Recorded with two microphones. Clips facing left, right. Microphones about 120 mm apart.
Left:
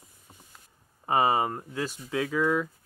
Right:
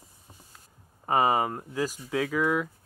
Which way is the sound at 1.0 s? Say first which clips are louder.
Even; centre (ahead or behind).